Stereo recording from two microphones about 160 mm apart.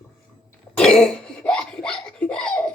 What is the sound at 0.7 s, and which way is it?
Cough, 5° left (ahead or behind).